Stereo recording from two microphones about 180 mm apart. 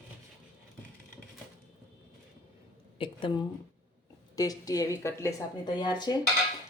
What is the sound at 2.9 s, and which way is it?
A woman's voice, 30° left (ahead or behind).